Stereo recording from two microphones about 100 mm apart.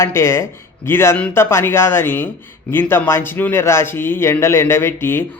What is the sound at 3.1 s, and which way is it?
A man's voice, 25° left (ahead or behind).